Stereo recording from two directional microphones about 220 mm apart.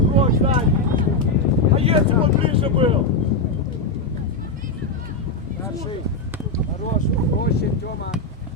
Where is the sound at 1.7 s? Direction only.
25° right (ahead or behind).